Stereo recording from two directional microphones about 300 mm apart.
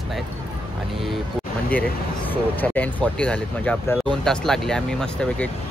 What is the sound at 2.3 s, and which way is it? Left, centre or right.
Speech, centre.